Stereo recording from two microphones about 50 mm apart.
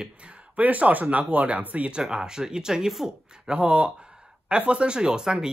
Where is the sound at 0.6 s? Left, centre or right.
Right.